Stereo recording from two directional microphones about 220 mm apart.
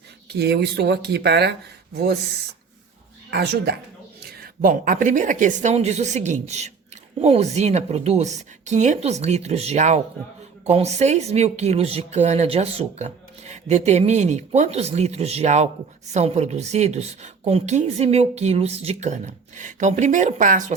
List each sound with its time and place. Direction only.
0.3 s speech: 50° right (ahead or behind)
3.2 s a woman's voice: 45° right (ahead or behind)